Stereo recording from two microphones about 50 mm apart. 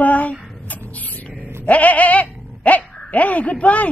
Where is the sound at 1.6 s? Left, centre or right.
Left.